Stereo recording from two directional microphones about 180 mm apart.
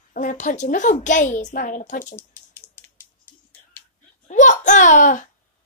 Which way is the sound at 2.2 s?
10° left (ahead or behind).